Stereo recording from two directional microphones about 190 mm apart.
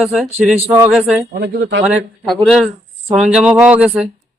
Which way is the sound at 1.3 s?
65° right (ahead or behind).